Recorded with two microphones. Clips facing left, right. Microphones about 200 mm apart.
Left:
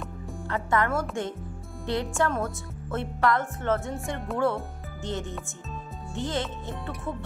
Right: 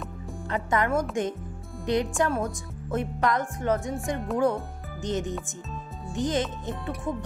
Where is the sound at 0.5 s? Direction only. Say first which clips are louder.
Right 1 dB; 20° right (ahead or behind).